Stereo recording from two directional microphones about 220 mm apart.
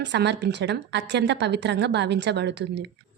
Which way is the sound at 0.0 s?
50° right (ahead or behind).